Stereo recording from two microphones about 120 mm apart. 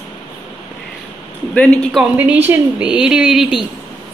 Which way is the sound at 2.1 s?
15° right (ahead or behind).